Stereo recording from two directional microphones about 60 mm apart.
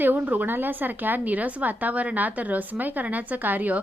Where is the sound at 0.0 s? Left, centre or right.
Right.